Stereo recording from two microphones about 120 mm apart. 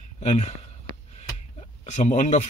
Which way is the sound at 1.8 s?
75° left (ahead or behind).